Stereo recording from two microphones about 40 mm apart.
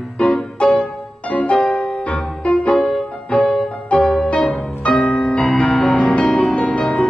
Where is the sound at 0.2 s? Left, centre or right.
Left.